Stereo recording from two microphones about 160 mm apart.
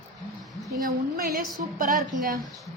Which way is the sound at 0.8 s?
65° right (ahead or behind).